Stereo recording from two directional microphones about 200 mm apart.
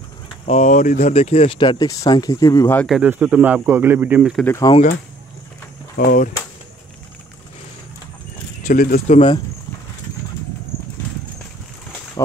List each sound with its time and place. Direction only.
0.5 s speech: 35° left (ahead or behind); by 2.9 s 10° left (ahead or behind)
2.9 s speech: 10° right (ahead or behind)
4.5 s speech: 15° left (ahead or behind)
5.9 s speech: 40° left (ahead or behind)
8.6 s speech: 45° left (ahead or behind)